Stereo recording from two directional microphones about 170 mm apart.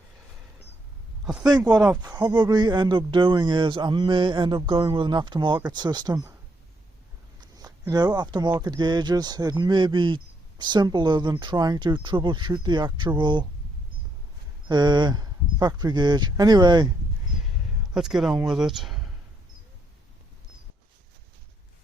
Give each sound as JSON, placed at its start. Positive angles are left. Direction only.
{"t": 1.2, "sound": "speech", "side_deg": -5}
{"t": 1.5, "sound": "speech", "side_deg": -25}
{"t": 7.4, "sound": "speech", "side_deg": -20}
{"t": 14.7, "sound": "speech", "side_deg": -25}
{"t": 17.9, "sound": "speech", "side_deg": -5}